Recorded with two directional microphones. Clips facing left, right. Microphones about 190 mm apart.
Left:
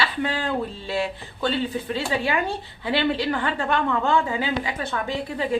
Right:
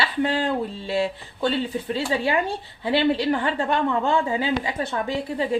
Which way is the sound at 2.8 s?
30° right (ahead or behind).